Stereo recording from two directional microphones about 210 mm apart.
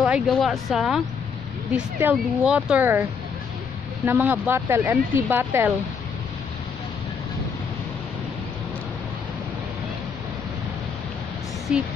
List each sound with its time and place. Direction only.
0.0 s speech: centre (ahead or behind)
11.7 s speech: 5° right (ahead or behind)